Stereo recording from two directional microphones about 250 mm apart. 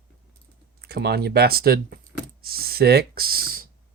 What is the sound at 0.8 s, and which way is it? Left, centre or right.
Speech, right.